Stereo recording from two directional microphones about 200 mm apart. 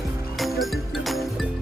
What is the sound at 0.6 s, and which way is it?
Music, centre (ahead or behind).